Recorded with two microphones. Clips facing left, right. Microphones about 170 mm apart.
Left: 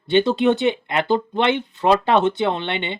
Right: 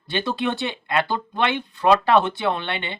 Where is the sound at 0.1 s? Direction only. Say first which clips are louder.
Left 8 dB; 20° left (ahead or behind).